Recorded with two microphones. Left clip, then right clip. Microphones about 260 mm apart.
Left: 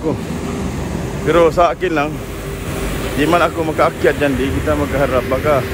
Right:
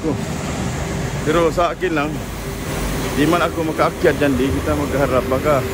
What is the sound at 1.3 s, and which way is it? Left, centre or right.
Speech, centre.